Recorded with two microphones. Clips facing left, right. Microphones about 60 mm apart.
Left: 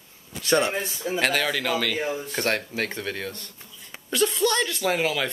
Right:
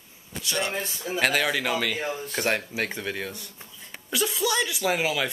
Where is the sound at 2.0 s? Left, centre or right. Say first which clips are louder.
Left 2 dB; centre.